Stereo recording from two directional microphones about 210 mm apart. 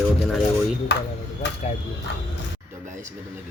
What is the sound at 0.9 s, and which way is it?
Speech, 55° left (ahead or behind).